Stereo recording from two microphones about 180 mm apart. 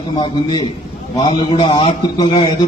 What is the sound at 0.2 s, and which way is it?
A man's voice, 20° left (ahead or behind).